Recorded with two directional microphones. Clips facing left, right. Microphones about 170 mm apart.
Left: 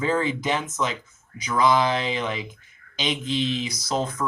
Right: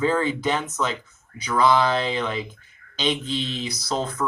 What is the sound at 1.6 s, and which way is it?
Speech, 15° left (ahead or behind).